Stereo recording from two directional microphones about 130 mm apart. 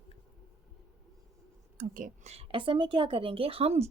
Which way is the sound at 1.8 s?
85° right.